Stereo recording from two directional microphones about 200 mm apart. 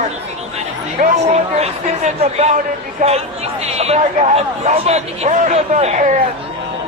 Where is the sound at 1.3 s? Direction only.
30° right (ahead or behind).